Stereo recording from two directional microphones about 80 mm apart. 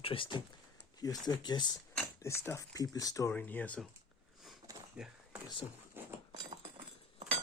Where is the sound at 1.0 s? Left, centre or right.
Left.